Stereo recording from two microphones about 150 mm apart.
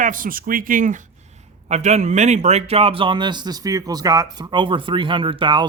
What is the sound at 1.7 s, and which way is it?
A man's voice, 50° right (ahead or behind).